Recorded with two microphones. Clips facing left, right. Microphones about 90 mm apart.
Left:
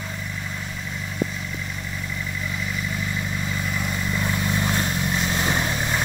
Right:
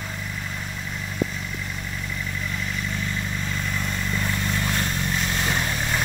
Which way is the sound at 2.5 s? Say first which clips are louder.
Left 2 dB; 5° left (ahead or behind).